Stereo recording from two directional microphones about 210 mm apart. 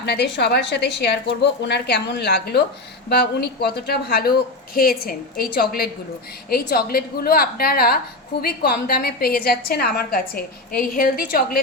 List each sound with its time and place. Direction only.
0.0 s a woman's voice: 55° left (ahead or behind)